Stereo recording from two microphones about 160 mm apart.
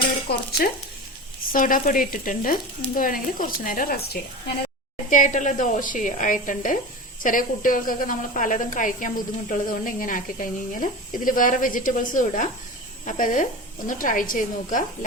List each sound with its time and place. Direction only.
0.3 s speech: 80° left
1.5 s a woman's voice: 55° left (ahead or behind)
5.0 s a woman's voice: 55° left (ahead or behind)